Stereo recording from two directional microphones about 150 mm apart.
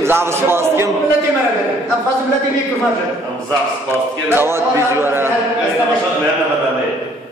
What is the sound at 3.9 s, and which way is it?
Speech, 15° right (ahead or behind).